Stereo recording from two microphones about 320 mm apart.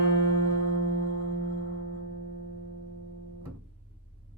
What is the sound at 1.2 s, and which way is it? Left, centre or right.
Music, right.